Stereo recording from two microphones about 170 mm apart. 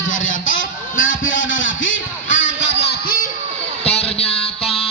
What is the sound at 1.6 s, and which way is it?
Music, 90° left.